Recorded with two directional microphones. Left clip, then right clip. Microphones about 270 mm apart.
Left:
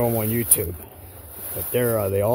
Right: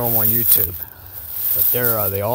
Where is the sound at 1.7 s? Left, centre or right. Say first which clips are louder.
Left 1 dB; centre.